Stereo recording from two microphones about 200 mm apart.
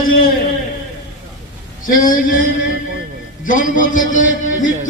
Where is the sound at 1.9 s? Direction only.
45° left (ahead or behind).